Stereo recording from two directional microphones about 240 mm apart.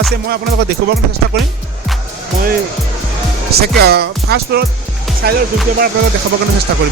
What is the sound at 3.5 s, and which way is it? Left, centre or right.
Music, right.